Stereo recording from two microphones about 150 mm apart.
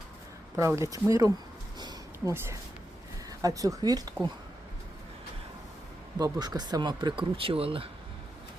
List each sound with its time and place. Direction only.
0.5 s speech: 20° right (ahead or behind)
1.8 s a sound: 25° right (ahead or behind)
2.3 s speech: 15° right (ahead or behind)
6.1 s speech: 25° right (ahead or behind)